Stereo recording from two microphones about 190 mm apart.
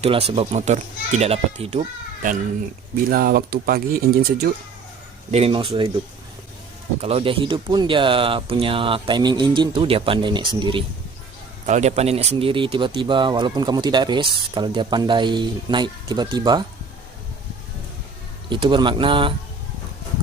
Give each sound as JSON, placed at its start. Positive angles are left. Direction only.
{"t": 0.0, "sound": "a child's voice", "side_deg": -30}
{"t": 3.1, "sound": "speech", "side_deg": -50}
{"t": 5.3, "sound": "speech", "side_deg": -30}
{"t": 7.0, "sound": "speech", "side_deg": -30}
{"t": 11.6, "sound": "speech", "side_deg": -35}
{"t": 18.4, "sound": "speech", "side_deg": -25}